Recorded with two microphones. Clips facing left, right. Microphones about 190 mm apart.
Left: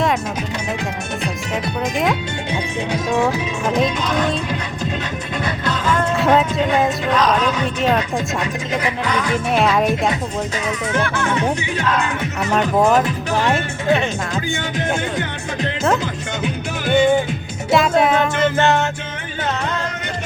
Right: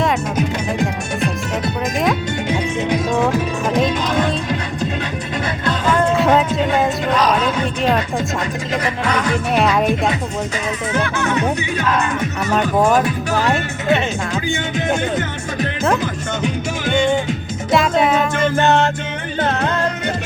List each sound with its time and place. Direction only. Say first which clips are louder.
3.7 s speech: even; centre (ahead or behind)
6.1 s speech: right 1 dB; centre (ahead or behind)
9.5 s speech: even; centre (ahead or behind)
12.5 s speech: even; centre (ahead or behind)
16.4 s music: right 2 dB; 5° left (ahead or behind)
17.7 s speech: even; centre (ahead or behind)
18.5 s music: right 3 dB; 15° right (ahead or behind)